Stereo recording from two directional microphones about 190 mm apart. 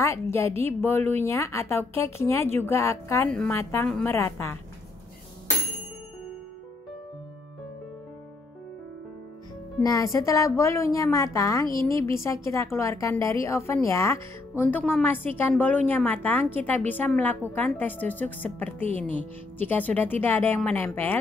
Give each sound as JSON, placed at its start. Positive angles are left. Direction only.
{"t": 0.0, "sound": "a woman's voice", "side_deg": 15}
{"t": 9.8, "sound": "a woman's voice", "side_deg": 15}